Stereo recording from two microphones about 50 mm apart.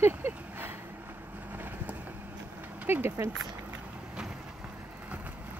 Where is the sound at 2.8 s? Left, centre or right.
Right.